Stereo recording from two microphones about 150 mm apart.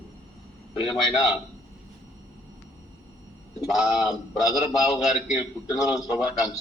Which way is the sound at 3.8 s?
5° right (ahead or behind).